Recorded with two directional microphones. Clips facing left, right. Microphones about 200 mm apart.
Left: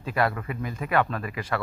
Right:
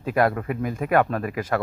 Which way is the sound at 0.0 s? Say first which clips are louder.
Right 5 dB; 50° right (ahead or behind).